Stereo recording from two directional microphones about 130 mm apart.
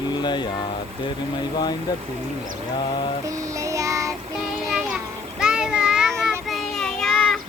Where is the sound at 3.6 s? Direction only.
25° right (ahead or behind).